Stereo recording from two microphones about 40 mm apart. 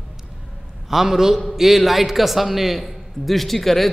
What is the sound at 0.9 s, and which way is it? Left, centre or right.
A man's voice, centre.